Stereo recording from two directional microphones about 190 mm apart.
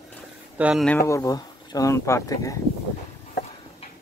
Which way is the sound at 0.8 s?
15° left (ahead or behind).